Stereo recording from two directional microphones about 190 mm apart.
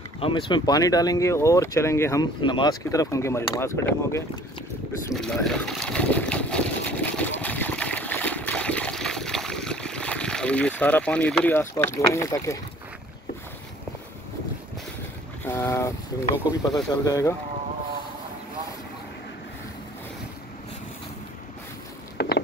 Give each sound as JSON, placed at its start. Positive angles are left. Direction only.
{"t": 0.2, "sound": "speech", "side_deg": 25}
{"t": 5.1, "sound": "boat", "side_deg": 5}
{"t": 15.4, "sound": "speech", "side_deg": 10}
{"t": 22.1, "sound": "a sound", "side_deg": 55}